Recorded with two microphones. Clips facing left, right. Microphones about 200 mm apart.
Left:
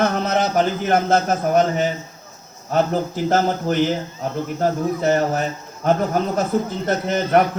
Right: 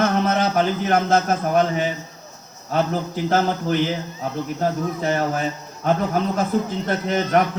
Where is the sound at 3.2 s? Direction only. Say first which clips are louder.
Even; 45° left (ahead or behind).